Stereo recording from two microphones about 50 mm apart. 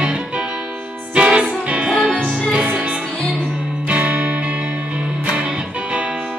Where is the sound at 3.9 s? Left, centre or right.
Right.